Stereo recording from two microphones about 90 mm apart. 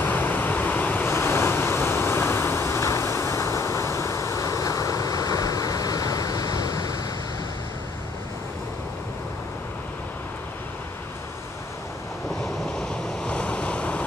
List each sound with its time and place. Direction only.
0.0 s vehicle: 20° left (ahead or behind); by 7.0 s 40° left (ahead or behind)
12.7 s waves: 10° left (ahead or behind)